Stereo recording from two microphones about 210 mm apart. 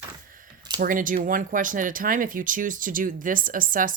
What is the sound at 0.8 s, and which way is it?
Speech, 40° right (ahead or behind).